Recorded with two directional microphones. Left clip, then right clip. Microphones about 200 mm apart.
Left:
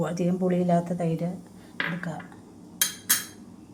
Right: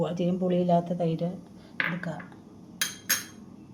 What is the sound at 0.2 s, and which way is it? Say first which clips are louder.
A woman's voice: left 1 dB; 5° right (ahead or behind).